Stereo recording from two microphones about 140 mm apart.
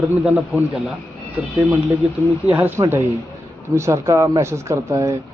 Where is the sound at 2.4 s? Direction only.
15° right (ahead or behind).